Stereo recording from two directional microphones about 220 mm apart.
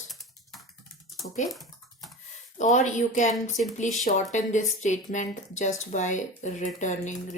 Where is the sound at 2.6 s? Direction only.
35° left (ahead or behind).